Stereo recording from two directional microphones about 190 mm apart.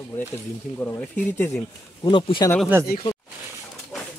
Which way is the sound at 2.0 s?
25° left (ahead or behind).